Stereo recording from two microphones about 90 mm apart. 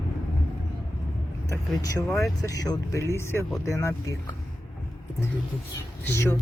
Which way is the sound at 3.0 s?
30° left (ahead or behind).